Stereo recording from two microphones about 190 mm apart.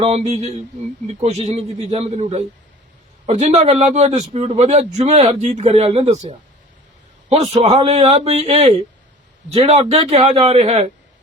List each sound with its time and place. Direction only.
0.0 s a man's voice: 35° right (ahead or behind)